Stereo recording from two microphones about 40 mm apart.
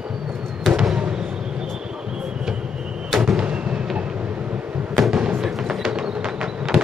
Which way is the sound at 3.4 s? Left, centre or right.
Right.